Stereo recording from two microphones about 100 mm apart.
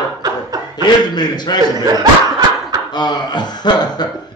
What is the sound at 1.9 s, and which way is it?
Snicker, 40° right (ahead or behind).